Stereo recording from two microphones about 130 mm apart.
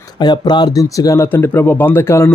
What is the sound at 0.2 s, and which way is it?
Speech, 35° left (ahead or behind).